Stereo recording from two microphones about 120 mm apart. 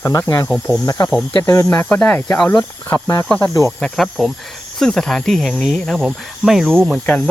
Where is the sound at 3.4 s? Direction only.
25° left (ahead or behind).